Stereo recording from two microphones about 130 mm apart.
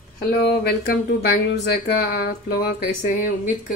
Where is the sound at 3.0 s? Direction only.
80° left.